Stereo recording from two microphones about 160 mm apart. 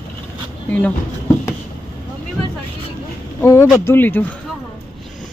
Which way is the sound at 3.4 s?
15° left (ahead or behind).